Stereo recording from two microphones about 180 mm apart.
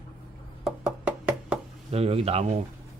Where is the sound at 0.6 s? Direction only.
5° right (ahead or behind).